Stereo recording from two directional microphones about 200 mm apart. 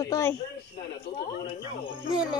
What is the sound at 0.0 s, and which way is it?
Speech, 15° left (ahead or behind).